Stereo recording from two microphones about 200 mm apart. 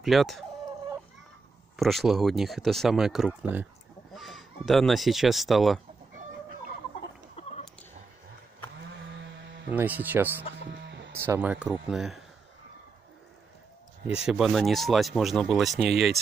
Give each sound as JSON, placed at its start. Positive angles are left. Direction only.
{"t": 0.0, "sound": "speech", "side_deg": 0}
{"t": 1.8, "sound": "speech", "side_deg": 0}
{"t": 7.4, "sound": "a sound", "side_deg": 30}
{"t": 9.7, "sound": "speech", "side_deg": -10}
{"t": 10.7, "sound": "music", "side_deg": -60}
{"t": 11.2, "sound": "speech", "side_deg": -10}
{"t": 14.2, "sound": "speech", "side_deg": 0}